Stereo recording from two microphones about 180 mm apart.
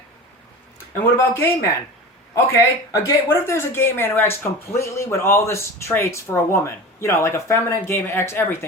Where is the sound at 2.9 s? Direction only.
15° left (ahead or behind).